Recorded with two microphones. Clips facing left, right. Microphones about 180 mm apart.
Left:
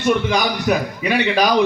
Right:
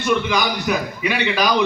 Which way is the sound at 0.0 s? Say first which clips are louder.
Left 2 dB; 40° left (ahead or behind).